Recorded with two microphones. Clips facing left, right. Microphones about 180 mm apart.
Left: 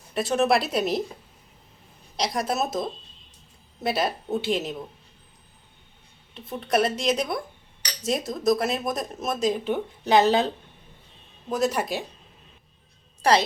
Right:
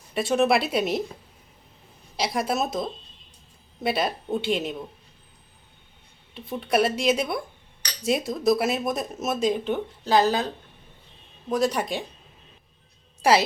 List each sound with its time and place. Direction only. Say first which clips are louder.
0.1 s speech: right 1 dB; centre (ahead or behind)
2.1 s speech: right 1 dB; 5° right (ahead or behind)
6.3 s speech: right 1 dB; centre (ahead or behind)
10.0 s speech: left 2 dB; 20° left (ahead or behind)
11.4 s speech: right 1 dB; centre (ahead or behind)
13.2 s a woman's voice: right 1 dB; 10° right (ahead or behind)